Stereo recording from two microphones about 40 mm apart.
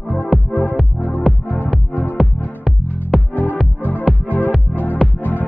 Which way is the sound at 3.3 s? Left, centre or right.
Left.